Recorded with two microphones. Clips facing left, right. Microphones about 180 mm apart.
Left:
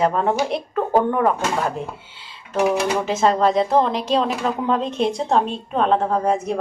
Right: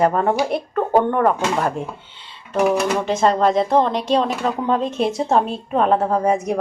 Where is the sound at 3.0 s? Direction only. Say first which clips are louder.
Right 1 dB; centre (ahead or behind).